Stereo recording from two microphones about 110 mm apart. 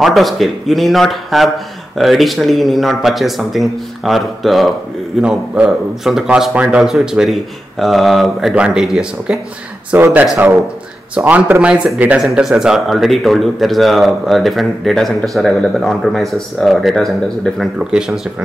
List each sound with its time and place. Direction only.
0.0 s speech: centre (ahead or behind)
9.9 s speech: 20° right (ahead or behind); by 18.2 s 5° right (ahead or behind)